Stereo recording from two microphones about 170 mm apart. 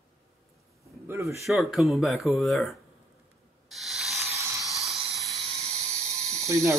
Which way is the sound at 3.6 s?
Centre (ahead or behind).